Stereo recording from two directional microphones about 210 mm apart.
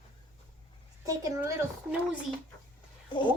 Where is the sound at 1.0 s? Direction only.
15° right (ahead or behind).